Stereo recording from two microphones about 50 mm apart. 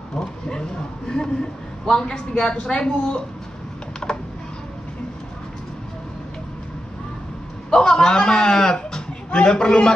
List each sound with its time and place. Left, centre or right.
0.2 s speech: centre
4.0 s computer keyboard: left
7.7 s a man's voice: centre